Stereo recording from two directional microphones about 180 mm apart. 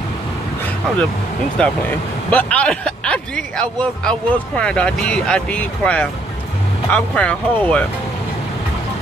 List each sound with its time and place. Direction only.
1.6 s speech: 5° left (ahead or behind)